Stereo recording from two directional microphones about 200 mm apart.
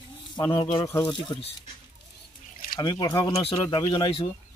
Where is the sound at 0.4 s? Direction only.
20° left (ahead or behind).